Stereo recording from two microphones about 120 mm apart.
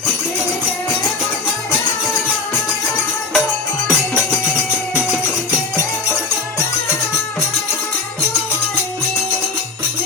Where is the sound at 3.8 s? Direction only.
25° left (ahead or behind).